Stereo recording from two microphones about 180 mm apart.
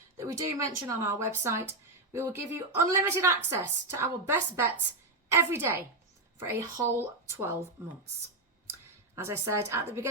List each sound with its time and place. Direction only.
0.2 s a woman's voice: 20° right (ahead or behind)
9.1 s a woman's voice: 15° right (ahead or behind)